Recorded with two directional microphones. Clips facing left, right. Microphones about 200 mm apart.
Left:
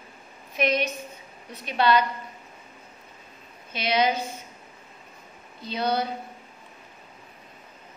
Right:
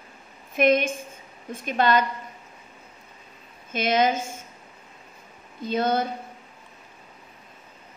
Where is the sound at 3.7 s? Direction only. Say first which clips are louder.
Right 2 dB; 50° right (ahead or behind).